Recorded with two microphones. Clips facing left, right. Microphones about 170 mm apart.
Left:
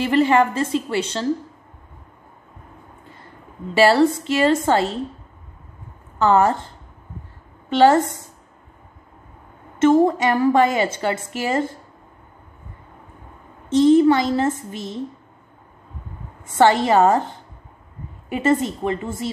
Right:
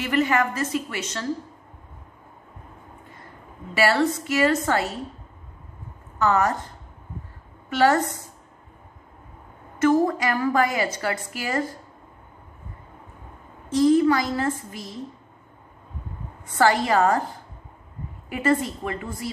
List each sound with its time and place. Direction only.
0.0 s a woman's voice: 30° left (ahead or behind)
3.7 s a woman's voice: 30° left (ahead or behind)
6.1 s a woman's voice: 30° left (ahead or behind)
7.7 s a woman's voice: 25° left (ahead or behind)
9.8 s a woman's voice: 25° left (ahead or behind)
13.7 s a woman's voice: 25° left (ahead or behind)
16.4 s a woman's voice: 25° left (ahead or behind)